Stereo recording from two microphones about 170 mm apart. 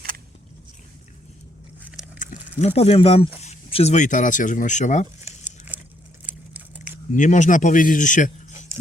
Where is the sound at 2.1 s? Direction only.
50° left (ahead or behind).